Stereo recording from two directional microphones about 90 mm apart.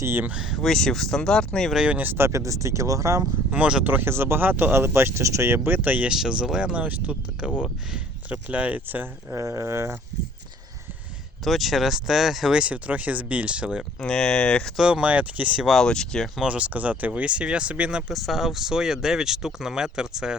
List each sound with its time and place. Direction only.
0.0 s speech: 25° right (ahead or behind)
0.3 s speech: 10° right (ahead or behind); by 1.7 s 10° left (ahead or behind)
1.7 s speech: 15° right (ahead or behind); by 3.2 s 35° right (ahead or behind)
3.5 s speech: 10° right (ahead or behind)
3.8 s speech: 25° right (ahead or behind)
6.1 s speech: 10° right (ahead or behind)
9.3 s speech: 35° right (ahead or behind)
11.4 s speech: centre (ahead or behind)
14.0 s speech: 10° left (ahead or behind)
14.8 s speech: 10° right (ahead or behind)
15.7 s speech: 5° left (ahead or behind)
16.4 s speech: 15° right (ahead or behind)
18.1 s speech: centre (ahead or behind)